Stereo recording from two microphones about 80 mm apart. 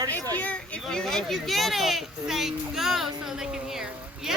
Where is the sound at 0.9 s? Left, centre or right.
Centre.